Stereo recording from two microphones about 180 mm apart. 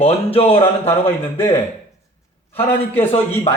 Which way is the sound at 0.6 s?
10° left (ahead or behind).